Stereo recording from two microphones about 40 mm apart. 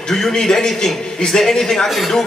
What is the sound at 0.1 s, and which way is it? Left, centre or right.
A man's voice, centre.